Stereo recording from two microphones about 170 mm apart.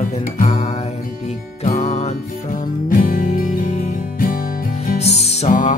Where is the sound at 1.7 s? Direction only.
40° left (ahead or behind).